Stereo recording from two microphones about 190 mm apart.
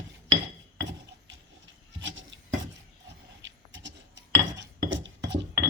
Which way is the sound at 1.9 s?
75° right (ahead or behind).